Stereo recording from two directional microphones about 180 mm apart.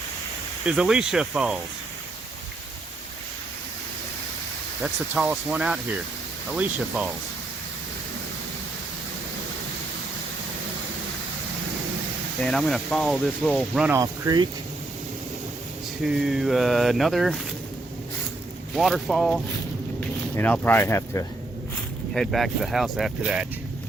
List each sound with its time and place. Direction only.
0.6 s speech: 5° right (ahead or behind)
4.8 s speech: 5° right (ahead or behind)
12.4 s speech: 5° left (ahead or behind)
13.9 s speech: 20° right (ahead or behind)
16.0 s speech: centre (ahead or behind)
18.7 s speech: centre (ahead or behind); by 21.2 s 15° left (ahead or behind)
22.1 s speech: centre (ahead or behind)